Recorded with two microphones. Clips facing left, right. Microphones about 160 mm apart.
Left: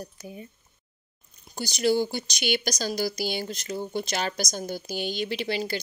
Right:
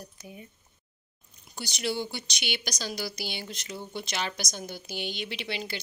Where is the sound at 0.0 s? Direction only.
35° left (ahead or behind).